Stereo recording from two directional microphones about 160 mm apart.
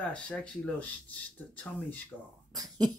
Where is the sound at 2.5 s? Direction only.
25° right (ahead or behind).